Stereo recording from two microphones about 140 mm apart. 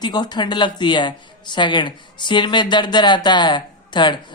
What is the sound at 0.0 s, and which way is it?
A woman's voice, 30° left (ahead or behind).